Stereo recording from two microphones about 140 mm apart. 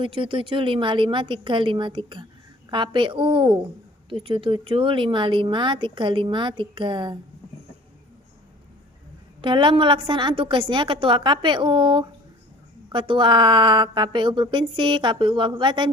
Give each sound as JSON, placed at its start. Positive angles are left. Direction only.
{"t": 0.0, "sound": "speech", "side_deg": -40}
{"t": 9.4, "sound": "speech", "side_deg": -35}